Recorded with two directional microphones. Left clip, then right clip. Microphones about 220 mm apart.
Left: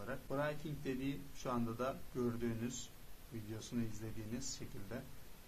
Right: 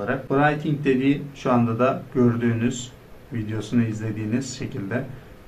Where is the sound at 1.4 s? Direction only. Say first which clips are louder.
Right 18 dB; 50° left (ahead or behind).